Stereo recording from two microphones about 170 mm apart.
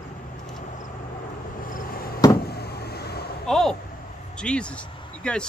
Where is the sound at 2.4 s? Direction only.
70° left (ahead or behind).